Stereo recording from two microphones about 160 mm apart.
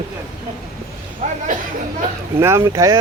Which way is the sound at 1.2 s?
45° right (ahead or behind).